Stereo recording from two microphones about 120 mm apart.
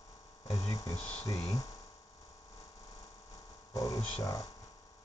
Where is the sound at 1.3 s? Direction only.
30° left (ahead or behind).